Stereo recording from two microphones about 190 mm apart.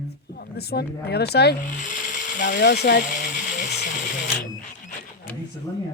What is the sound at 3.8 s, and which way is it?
Printer, 40° left (ahead or behind).